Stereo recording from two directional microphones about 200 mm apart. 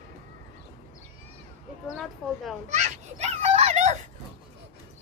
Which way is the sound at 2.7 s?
35° right (ahead or behind).